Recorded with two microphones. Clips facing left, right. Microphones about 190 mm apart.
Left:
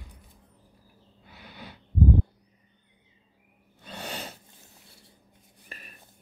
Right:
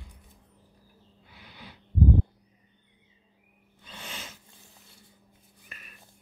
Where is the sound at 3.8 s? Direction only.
40° left (ahead or behind).